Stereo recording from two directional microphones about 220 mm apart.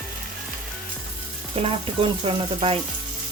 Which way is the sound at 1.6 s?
25° right (ahead or behind).